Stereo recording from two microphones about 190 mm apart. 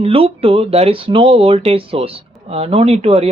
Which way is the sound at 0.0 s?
30° right (ahead or behind).